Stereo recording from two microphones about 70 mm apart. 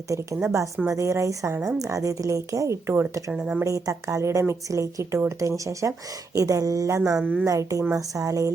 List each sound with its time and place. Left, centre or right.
0.4 s a woman's voice: right
3.3 s a woman's voice: centre
3.6 s a woman's voice: right
7.2 s a woman's voice: centre
7.4 s a woman's voice: right